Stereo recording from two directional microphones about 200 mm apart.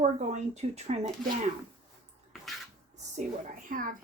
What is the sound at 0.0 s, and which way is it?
Speech, 35° right (ahead or behind).